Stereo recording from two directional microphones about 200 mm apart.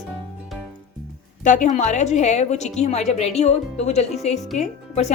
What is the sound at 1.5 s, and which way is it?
A woman's voice, 40° left (ahead or behind).